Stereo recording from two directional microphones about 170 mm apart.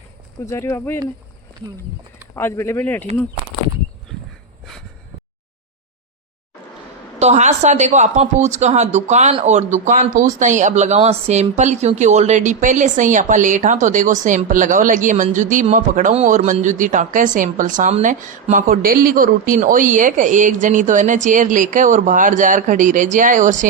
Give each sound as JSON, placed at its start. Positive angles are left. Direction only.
{"t": 0.4, "sound": "speech", "side_deg": 15}
{"t": 2.3, "sound": "speech", "side_deg": 15}
{"t": 7.2, "sound": "speech", "side_deg": -40}